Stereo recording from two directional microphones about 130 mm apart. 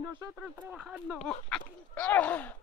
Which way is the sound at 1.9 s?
10° left (ahead or behind).